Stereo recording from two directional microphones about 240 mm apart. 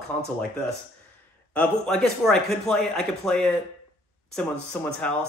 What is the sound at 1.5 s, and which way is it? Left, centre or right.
Speech, centre.